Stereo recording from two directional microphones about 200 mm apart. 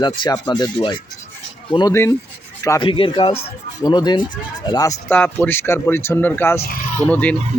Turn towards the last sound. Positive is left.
turn(degrees=10)  # may be behind; listen again after turning